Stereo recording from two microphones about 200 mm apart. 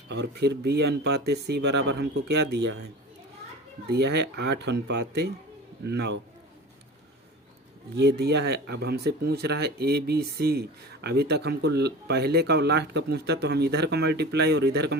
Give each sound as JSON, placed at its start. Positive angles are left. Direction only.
{"t": 0.1, "sound": "speech", "side_deg": -55}
{"t": 3.8, "sound": "speech", "side_deg": -55}
{"t": 7.9, "sound": "speech", "side_deg": -55}